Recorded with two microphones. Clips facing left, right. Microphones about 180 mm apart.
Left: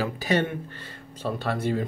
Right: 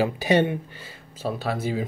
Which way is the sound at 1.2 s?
5° right (ahead or behind).